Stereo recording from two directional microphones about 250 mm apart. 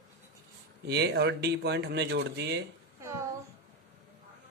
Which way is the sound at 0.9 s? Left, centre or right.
Right.